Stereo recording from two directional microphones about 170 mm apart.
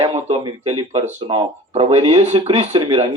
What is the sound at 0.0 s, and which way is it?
Speech, 35° right (ahead or behind).